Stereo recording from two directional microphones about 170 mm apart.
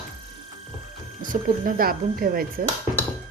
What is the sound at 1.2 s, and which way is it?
Speech, 50° right (ahead or behind).